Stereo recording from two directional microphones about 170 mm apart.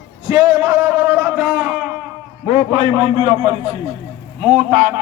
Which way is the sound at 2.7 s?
25° right (ahead or behind).